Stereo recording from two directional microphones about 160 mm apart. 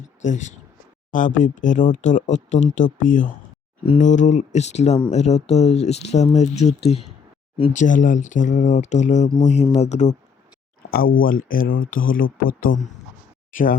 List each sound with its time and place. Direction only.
0.3 s speech: 50° left (ahead or behind)
7.7 s speech: 50° left (ahead or behind)
10.9 s speech: 65° left (ahead or behind)